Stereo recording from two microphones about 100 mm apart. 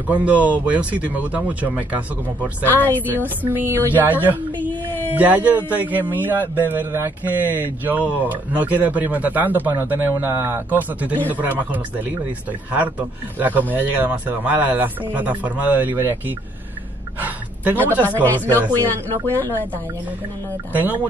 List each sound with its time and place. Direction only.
0.1 s speech: 15° right (ahead or behind)
2.6 s speech: 20° left (ahead or behind)
3.4 s speech: 20° right (ahead or behind)
4.6 s a sound: 20° left (ahead or behind)
5.1 s speech: 15° right (ahead or behind)
13.4 s speech: 15° right (ahead or behind)
18.1 s speech: 20° left (ahead or behind)
19.2 s speech: 25° right (ahead or behind)
20.7 s speech: 20° right (ahead or behind)